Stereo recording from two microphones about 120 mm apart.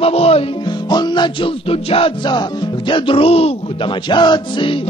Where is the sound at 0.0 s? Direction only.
55° left (ahead or behind).